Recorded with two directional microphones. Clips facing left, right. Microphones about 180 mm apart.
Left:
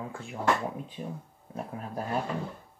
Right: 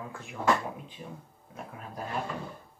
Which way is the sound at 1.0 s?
40° left (ahead or behind).